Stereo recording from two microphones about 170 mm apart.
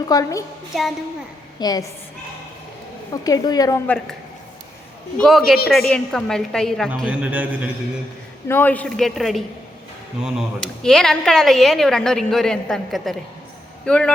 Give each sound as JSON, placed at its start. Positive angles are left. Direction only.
{"t": 0.1, "sound": "a woman's voice", "side_deg": 20}
{"t": 0.7, "sound": "speech", "side_deg": 0}
{"t": 1.5, "sound": "a woman's voice", "side_deg": 25}
{"t": 3.1, "sound": "a woman's voice", "side_deg": 20}
{"t": 3.8, "sound": "speech", "side_deg": 5}
{"t": 5.1, "sound": "speech", "side_deg": 5}
{"t": 8.4, "sound": "speech", "side_deg": 10}